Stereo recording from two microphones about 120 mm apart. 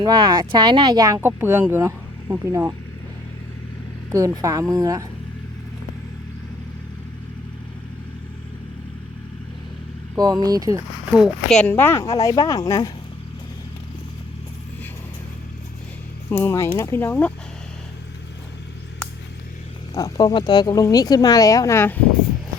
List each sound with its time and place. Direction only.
0.0 s speech: 35° right (ahead or behind)
1.4 s speech: 20° right (ahead or behind)
4.4 s speech: 30° right (ahead or behind)
10.4 s speech: 30° right (ahead or behind)
11.1 s speech: centre (ahead or behind)
11.7 s speech: 20° left (ahead or behind)
16.3 s speech: 20° left (ahead or behind)
19.9 s speech: 30° left (ahead or behind)